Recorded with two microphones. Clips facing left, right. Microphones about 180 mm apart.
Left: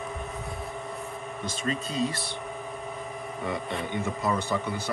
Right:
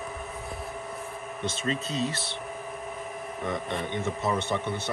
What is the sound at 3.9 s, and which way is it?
Speech, 20° right (ahead or behind).